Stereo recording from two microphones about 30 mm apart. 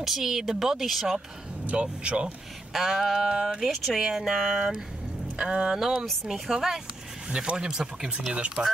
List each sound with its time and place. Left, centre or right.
0.0 s speech: centre
1.8 s speech: right
2.7 s speech: centre
3.0 s speech: centre
4.1 s speech: centre
5.4 s speech: right
5.8 s speech: centre
7.2 s speech: right
8.3 s speech: right